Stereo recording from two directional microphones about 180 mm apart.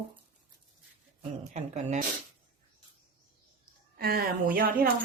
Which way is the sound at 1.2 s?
40° right (ahead or behind).